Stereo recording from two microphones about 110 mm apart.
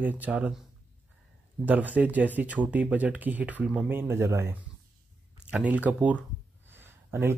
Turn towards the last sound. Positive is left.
turn(degrees=-20)  # may be behind; listen again after turning